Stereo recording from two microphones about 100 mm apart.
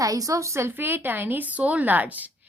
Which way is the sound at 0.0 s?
35° right (ahead or behind).